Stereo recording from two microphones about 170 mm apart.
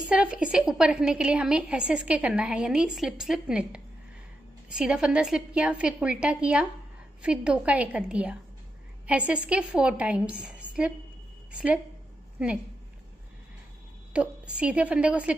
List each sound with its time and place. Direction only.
0.1 s a woman's voice: 5° right (ahead or behind)
14.1 s a woman's voice: 5° right (ahead or behind)